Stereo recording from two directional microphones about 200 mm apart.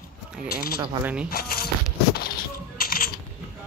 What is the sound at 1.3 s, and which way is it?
Speech, 50° left (ahead or behind).